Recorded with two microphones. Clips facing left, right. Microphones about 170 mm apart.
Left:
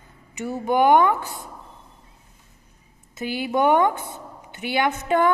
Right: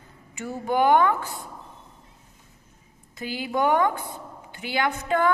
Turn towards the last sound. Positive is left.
turn(degrees=20)  # may be behind; listen again after turning